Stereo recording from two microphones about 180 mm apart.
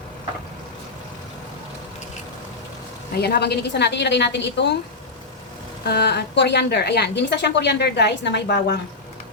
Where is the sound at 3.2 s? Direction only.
60° left (ahead or behind).